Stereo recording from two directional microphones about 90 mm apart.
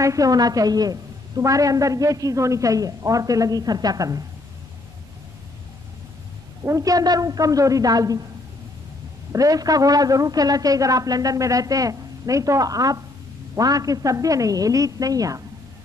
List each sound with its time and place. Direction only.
0.0 s a woman's voice: 40° right (ahead or behind)
6.6 s a woman's voice: 40° right (ahead or behind)
9.3 s a woman's voice: 40° right (ahead or behind)